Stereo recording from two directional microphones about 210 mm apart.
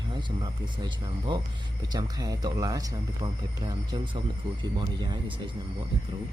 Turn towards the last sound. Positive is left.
turn(degrees=-20)  # may be behind; listen again after turning